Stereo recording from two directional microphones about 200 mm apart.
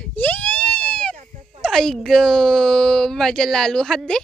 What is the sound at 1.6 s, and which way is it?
Speech, centre (ahead or behind).